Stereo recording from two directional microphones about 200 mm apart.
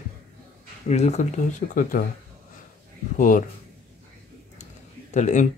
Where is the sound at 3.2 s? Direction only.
40° left (ahead or behind).